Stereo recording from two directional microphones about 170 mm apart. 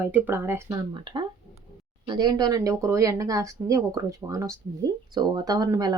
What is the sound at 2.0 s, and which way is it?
Speech, 25° right (ahead or behind).